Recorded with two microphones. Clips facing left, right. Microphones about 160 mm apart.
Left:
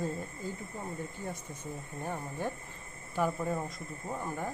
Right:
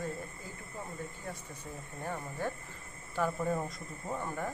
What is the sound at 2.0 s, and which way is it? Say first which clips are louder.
Speech: even; 15° left (ahead or behind).